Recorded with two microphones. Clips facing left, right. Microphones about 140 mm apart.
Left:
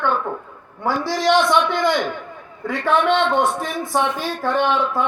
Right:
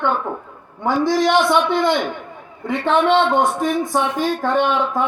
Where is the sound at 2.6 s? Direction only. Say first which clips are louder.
Right 2 dB; 25° right (ahead or behind).